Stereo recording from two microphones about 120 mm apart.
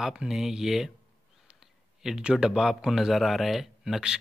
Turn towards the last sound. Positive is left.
turn(degrees=-5)  # may be behind; listen again after turning